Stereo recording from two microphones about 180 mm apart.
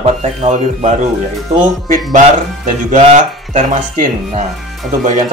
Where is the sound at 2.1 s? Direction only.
45° right (ahead or behind).